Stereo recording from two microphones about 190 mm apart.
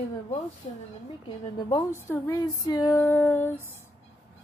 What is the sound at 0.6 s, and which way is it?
Speech, 35° left (ahead or behind).